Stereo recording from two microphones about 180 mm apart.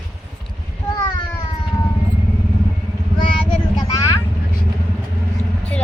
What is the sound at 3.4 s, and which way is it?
Vehicle, 20° left (ahead or behind).